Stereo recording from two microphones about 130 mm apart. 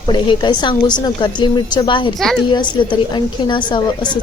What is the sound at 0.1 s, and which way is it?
A woman's voice, 35° left (ahead or behind).